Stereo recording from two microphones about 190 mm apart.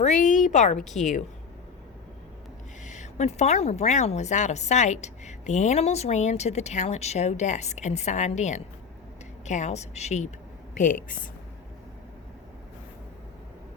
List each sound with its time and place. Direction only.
0.0 s a woman's voice: 40° left (ahead or behind)
0.8 s a woman's voice: centre (ahead or behind)
2.8 s a woman's voice: 40° left (ahead or behind)